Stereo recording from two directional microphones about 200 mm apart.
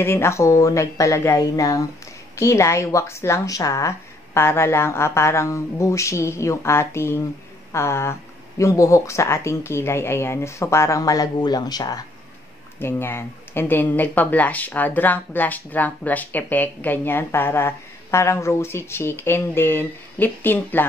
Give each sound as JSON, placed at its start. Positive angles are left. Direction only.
{"t": 0.0, "sound": "speech", "side_deg": 10}